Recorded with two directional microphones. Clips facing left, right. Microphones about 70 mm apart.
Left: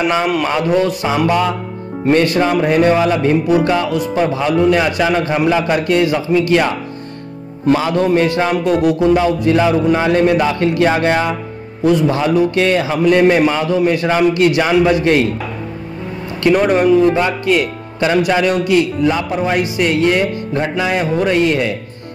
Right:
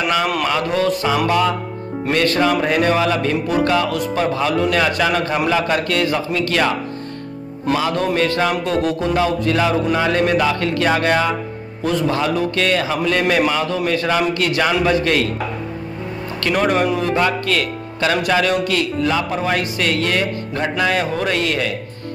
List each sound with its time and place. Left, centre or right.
0.7 s a man's voice: centre
1.2 s a man's voice: left
7.7 s a man's voice: left
16.5 s speech: centre
17.0 s a man's voice: centre